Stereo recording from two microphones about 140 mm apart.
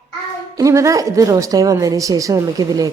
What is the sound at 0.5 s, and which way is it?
A woman's voice, 20° right (ahead or behind).